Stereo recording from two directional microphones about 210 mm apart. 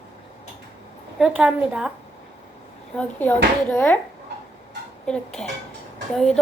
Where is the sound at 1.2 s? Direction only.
5° right (ahead or behind).